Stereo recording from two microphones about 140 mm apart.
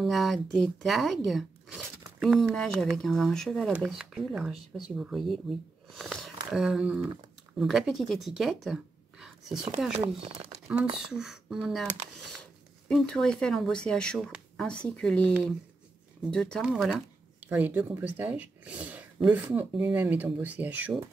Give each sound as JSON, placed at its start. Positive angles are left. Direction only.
{"t": 0.0, "sound": "speech", "side_deg": 0}
{"t": 9.2, "sound": "whispering", "side_deg": -5}
{"t": 10.0, "sound": "speech", "side_deg": -45}
{"t": 11.1, "sound": "speech", "side_deg": -5}